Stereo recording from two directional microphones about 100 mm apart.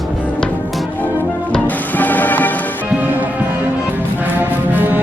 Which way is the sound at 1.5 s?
15° left (ahead or behind).